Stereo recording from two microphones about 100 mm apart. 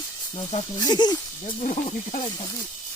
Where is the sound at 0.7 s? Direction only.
40° left (ahead or behind).